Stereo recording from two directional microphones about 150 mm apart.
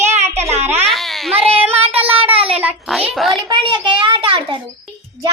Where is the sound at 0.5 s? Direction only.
45° right (ahead or behind).